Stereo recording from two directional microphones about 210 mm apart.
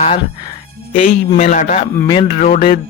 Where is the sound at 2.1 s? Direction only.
25° left (ahead or behind).